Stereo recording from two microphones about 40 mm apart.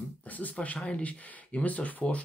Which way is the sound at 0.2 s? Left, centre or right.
Left.